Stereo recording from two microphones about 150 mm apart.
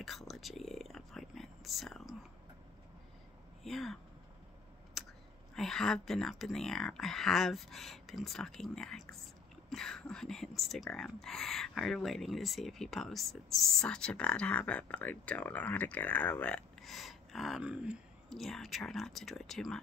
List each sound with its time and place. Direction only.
0.0 s whispering: centre (ahead or behind)
3.6 s speech: centre (ahead or behind)
5.0 s finger snapping: centre (ahead or behind)
5.5 s speech: 5° left (ahead or behind)